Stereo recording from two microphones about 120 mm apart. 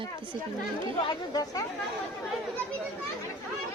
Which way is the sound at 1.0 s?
35° left (ahead or behind).